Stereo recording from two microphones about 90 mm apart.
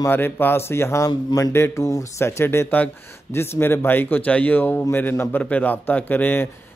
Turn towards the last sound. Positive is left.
turn(degrees=20)  # may be behind; listen again after turning